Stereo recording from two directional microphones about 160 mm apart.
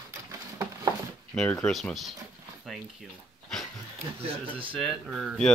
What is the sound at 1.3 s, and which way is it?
Speech, 5° left (ahead or behind).